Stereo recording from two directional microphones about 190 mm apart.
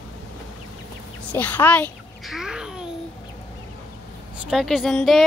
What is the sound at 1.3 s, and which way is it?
Speech, 10° left (ahead or behind).